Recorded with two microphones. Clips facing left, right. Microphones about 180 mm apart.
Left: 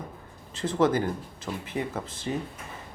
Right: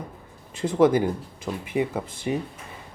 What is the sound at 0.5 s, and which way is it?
Speech, 15° right (ahead or behind).